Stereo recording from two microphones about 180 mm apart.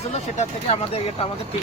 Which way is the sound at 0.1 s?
40° left (ahead or behind).